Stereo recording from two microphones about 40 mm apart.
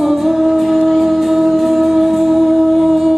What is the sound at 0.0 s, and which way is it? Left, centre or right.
Music, centre.